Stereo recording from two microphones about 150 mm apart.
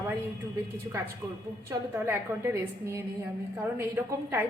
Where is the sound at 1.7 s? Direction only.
15° right (ahead or behind).